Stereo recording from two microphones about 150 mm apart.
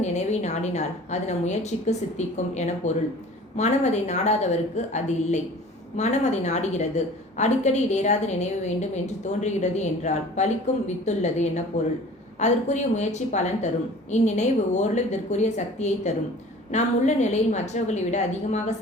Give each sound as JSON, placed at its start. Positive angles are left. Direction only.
{"t": 0.0, "sound": "a woman's voice", "side_deg": 50}